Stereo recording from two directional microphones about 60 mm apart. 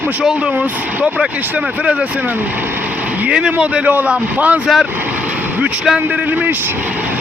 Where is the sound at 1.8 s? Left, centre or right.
Centre.